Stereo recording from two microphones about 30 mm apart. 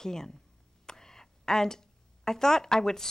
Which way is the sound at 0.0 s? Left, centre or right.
Centre.